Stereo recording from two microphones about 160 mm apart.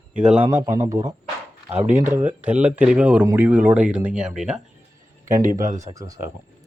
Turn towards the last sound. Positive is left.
turn(degrees=-50)  # may be behind; listen again after turning